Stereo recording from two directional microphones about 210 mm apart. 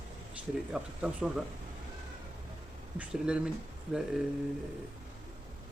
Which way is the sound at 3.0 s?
5° right (ahead or behind).